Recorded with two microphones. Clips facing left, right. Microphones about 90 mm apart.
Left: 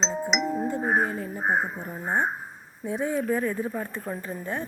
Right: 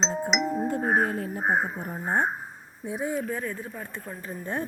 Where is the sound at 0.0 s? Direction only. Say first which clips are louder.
Even; centre (ahead or behind).